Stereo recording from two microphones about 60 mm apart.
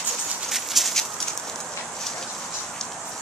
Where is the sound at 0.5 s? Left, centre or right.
Centre.